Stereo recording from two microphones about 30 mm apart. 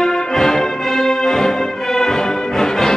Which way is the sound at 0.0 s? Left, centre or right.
Centre.